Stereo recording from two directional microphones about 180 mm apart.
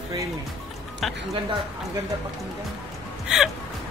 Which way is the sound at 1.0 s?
Centre (ahead or behind).